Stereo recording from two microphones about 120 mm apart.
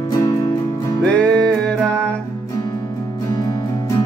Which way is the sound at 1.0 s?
10° left (ahead or behind).